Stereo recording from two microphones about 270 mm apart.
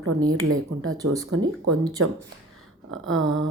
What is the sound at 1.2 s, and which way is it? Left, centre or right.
A woman's voice, right.